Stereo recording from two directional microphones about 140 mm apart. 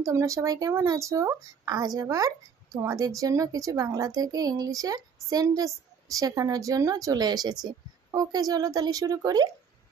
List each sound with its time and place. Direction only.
0.0 s speech: 20° right (ahead or behind)